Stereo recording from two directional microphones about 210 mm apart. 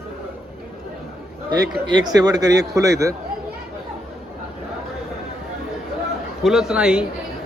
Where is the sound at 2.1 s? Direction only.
20° right (ahead or behind).